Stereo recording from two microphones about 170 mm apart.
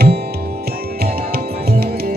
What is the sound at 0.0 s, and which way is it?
Music, 70° right (ahead or behind).